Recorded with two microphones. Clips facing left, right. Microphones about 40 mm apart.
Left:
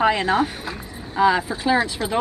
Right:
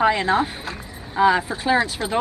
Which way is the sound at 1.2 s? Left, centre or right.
Centre.